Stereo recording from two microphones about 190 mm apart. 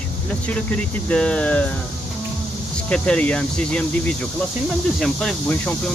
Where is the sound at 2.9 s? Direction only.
5° left (ahead or behind).